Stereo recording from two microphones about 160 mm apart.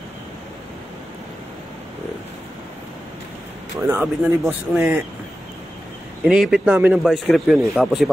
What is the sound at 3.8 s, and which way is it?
Speech, 10° right (ahead or behind).